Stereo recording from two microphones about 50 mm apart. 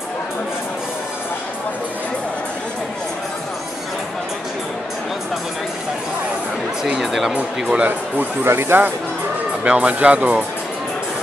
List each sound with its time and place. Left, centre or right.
6.8 s speech: centre
7.3 s speech: right
8.5 s speech: right
9.6 s speech: right